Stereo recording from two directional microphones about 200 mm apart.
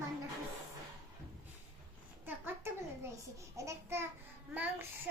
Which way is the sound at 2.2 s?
10° right (ahead or behind).